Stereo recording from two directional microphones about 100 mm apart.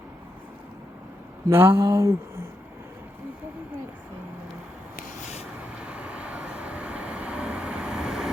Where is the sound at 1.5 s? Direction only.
25° right (ahead or behind).